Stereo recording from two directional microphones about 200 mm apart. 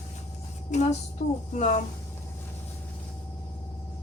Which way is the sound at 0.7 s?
35° left (ahead or behind).